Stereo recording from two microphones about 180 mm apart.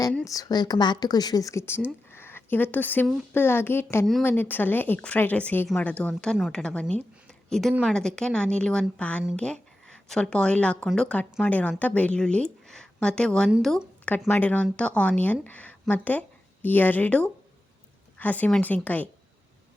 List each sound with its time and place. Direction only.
0.3 s a woman's voice: 20° left (ahead or behind)
2.0 s a sound: 10° left (ahead or behind)
3.3 s a woman's voice: 10° left (ahead or behind)